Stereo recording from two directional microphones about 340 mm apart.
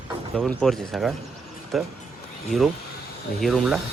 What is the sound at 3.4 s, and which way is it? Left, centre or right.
Speech, centre.